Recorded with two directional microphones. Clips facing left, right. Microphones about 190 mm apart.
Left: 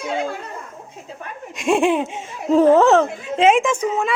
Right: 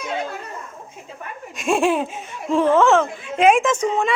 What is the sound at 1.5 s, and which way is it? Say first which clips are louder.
Speech: left 2 dB; 20° left (ahead or behind).